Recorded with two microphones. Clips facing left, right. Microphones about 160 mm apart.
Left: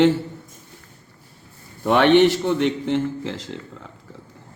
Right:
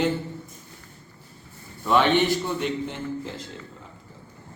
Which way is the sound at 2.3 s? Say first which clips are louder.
Left 5 dB; 80° left.